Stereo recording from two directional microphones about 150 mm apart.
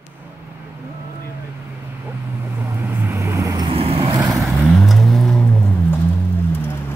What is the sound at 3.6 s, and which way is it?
Vehicle, 40° right (ahead or behind).